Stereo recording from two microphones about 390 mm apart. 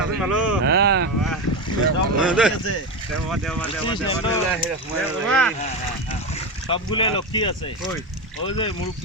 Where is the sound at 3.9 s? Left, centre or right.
Centre.